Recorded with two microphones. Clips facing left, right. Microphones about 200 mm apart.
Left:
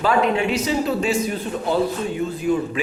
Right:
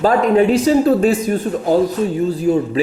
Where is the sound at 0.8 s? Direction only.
50° right (ahead or behind).